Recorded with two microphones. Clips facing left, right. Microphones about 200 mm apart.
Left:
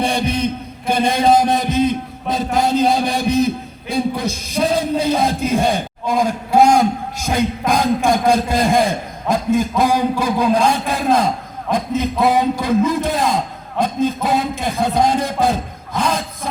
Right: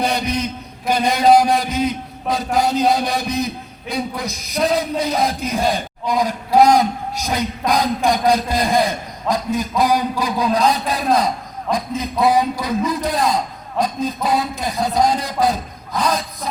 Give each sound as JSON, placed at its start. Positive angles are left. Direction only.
{"t": 0.0, "sound": "chant", "side_deg": 25}
{"t": 0.9, "sound": "a man's voice", "side_deg": 25}